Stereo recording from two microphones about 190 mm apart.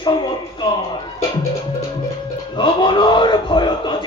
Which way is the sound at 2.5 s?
25° left (ahead or behind).